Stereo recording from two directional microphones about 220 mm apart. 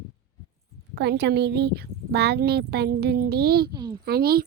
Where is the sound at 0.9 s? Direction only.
50° right (ahead or behind).